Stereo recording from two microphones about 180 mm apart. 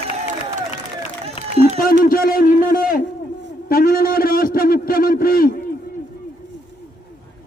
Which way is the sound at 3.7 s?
55° left (ahead or behind).